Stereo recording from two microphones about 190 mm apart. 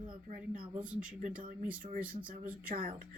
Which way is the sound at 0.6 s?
25° right (ahead or behind).